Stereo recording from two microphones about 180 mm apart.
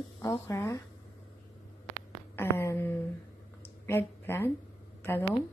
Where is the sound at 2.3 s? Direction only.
15° left (ahead or behind).